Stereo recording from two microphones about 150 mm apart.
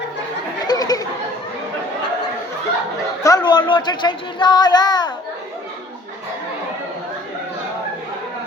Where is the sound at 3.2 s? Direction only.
25° left (ahead or behind).